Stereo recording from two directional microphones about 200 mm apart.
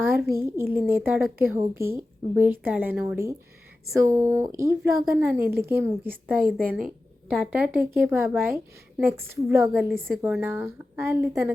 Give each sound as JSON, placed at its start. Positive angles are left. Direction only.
{"t": 0.0, "sound": "a sound", "side_deg": -10}
{"t": 0.4, "sound": "a woman's voice", "side_deg": -10}
{"t": 7.3, "sound": "a woman's voice", "side_deg": -5}